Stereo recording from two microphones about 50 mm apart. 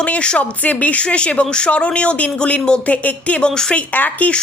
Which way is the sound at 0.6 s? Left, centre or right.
Left.